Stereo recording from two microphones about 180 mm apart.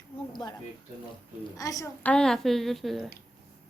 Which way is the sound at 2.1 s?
5° left (ahead or behind).